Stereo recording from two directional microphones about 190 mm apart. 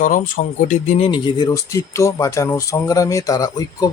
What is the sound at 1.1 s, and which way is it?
Speech, 25° left (ahead or behind).